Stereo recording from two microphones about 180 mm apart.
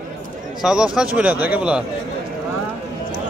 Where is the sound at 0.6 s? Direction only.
5° right (ahead or behind).